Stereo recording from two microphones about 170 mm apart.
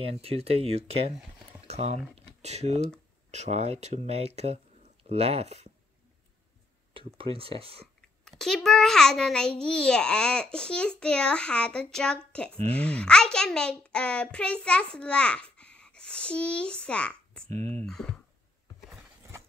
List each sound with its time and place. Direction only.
0.0 s speech: 35° right (ahead or behind)
2.1 s a sound: 40° right (ahead or behind)
3.3 s speech: 40° right (ahead or behind)
7.2 s speech: 35° right (ahead or behind)
8.3 s a child's voice: 5° left (ahead or behind)